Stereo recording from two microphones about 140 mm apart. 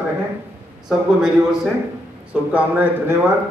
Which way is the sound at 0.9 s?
5° right (ahead or behind).